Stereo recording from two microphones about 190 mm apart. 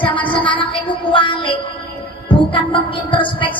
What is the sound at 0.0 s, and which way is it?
Music, 25° left (ahead or behind).